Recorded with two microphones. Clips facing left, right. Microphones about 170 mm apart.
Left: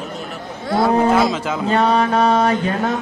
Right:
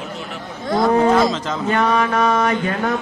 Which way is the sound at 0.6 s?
5° left (ahead or behind).